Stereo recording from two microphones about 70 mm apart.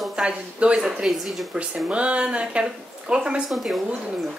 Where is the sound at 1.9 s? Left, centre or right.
Centre.